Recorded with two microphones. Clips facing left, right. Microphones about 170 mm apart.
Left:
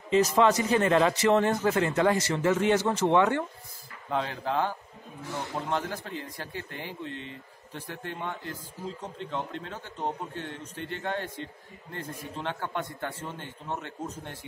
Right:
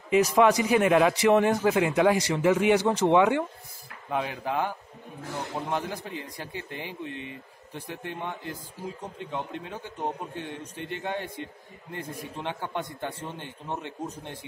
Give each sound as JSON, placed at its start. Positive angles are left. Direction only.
{"t": 0.1, "sound": "a man's voice", "side_deg": -10}